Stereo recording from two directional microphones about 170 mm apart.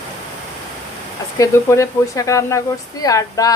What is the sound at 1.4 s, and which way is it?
Speech, 15° left (ahead or behind).